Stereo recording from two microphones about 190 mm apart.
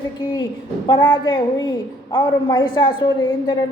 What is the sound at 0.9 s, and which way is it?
A woman's voice, 20° left (ahead or behind).